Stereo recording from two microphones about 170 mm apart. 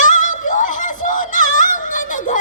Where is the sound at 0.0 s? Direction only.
50° left (ahead or behind).